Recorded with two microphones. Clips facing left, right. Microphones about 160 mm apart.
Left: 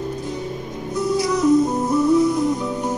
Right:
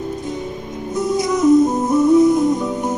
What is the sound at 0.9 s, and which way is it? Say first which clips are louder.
Music: right 2 dB; 20° right (ahead or behind).